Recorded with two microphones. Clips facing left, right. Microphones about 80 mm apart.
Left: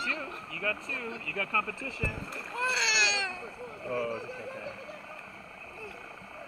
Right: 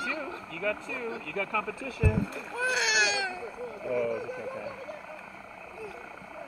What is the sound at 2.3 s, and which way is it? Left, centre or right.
Speech, centre.